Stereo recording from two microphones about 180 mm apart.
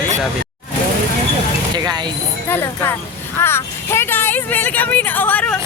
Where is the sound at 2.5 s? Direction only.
10° left (ahead or behind).